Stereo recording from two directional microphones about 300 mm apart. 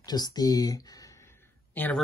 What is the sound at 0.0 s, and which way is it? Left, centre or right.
Speech, centre.